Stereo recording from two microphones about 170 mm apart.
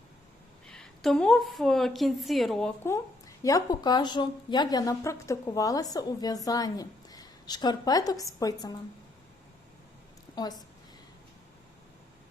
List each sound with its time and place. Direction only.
0.7 s a woman's voice: 5° left (ahead or behind); by 8.7 s 20° left (ahead or behind)